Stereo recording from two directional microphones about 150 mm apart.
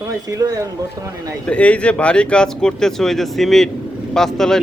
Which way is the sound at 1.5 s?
10° left (ahead or behind).